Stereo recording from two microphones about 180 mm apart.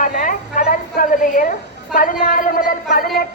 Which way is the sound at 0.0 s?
45° left (ahead or behind).